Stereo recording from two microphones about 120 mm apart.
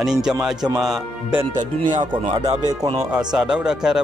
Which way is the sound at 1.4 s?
40° right (ahead or behind).